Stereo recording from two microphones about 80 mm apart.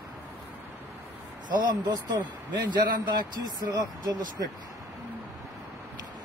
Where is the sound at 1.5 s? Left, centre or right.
Right.